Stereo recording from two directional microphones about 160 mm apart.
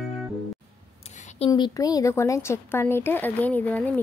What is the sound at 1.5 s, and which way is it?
Speech, 25° left (ahead or behind).